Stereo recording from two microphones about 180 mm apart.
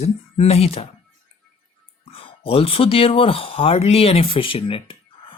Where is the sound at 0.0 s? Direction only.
35° left (ahead or behind).